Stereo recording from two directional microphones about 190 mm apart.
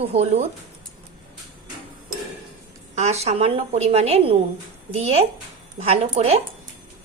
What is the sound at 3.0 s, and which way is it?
A woman's voice, 35° right (ahead or behind).